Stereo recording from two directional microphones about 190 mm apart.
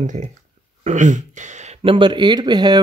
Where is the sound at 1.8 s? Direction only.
25° right (ahead or behind).